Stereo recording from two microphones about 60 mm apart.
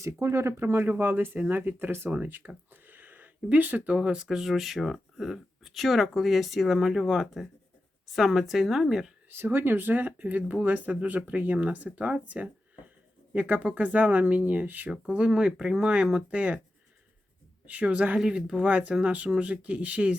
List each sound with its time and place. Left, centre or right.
0.0 s speech: right
0.6 s speech: right
2.0 s speech: right
2.8 s a sound: right
3.9 s speech: centre
9.3 s speech: right
17.7 s speech: right